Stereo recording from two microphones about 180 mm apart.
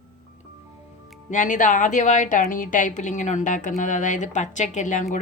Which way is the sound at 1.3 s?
45° left (ahead or behind).